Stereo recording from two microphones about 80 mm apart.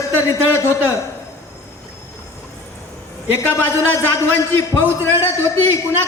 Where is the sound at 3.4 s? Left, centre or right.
Left.